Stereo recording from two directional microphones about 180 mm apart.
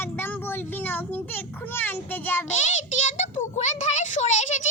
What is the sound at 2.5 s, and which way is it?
A child's voice, 40° left (ahead or behind).